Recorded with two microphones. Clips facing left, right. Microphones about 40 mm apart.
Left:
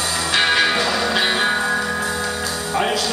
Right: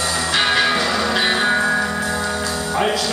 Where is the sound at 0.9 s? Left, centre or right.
Centre.